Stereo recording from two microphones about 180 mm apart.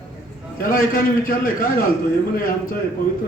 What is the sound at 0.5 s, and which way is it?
A man's voice, 50° left (ahead or behind).